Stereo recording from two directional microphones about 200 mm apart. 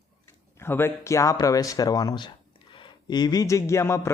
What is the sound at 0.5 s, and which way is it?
Speech, 10° left (ahead or behind).